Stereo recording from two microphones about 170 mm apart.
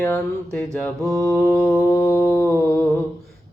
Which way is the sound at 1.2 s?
10° left (ahead or behind).